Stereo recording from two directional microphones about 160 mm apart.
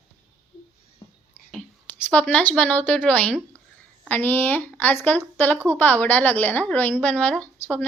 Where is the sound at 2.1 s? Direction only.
10° left (ahead or behind).